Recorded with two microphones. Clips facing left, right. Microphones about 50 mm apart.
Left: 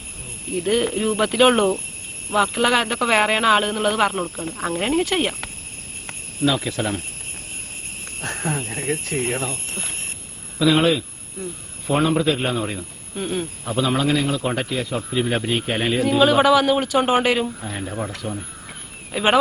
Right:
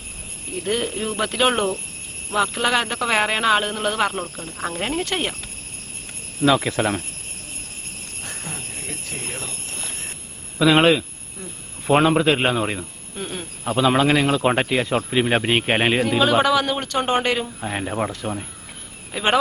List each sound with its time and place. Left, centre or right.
0.6 s speech: centre
6.5 s speech: right
8.2 s speech: left
10.6 s a man's voice: right
12.5 s speech: right
13.1 s speech: centre
13.7 s a man's voice: right
16.0 s speech: centre
17.6 s speech: right
19.1 s speech: centre